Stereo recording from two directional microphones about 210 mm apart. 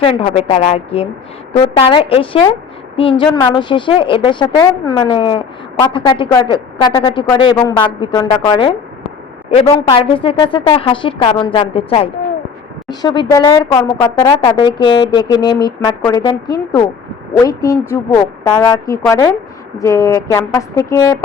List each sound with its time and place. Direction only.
0.0 s a woman's voice: 25° left (ahead or behind)